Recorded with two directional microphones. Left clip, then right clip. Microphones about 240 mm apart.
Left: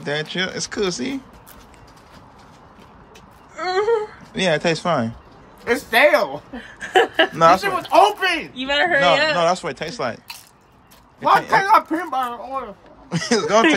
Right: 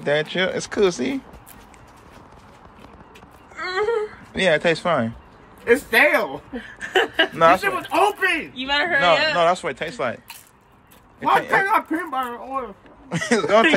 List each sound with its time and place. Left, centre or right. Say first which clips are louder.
0.0 s speech: right 3 dB; centre
4.3 s speech: right 1 dB; centre
6.5 s a sound: left 4 dB; left
7.3 s speech: left 1 dB; centre
8.5 s speech: left 5 dB; left
9.4 s speech: even; centre